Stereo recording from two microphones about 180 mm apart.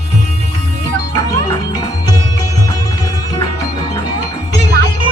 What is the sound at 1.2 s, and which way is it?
Music, 20° left (ahead or behind).